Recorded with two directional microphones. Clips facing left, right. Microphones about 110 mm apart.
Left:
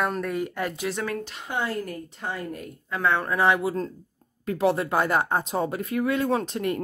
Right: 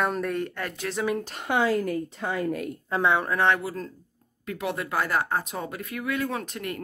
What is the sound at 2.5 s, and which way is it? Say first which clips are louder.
Speech: right 6 dB; 90° right.